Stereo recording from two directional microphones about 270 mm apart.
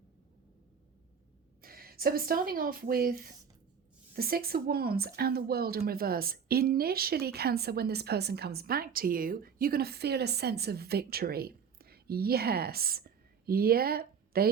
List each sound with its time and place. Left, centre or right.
1.6 s a woman's voice: right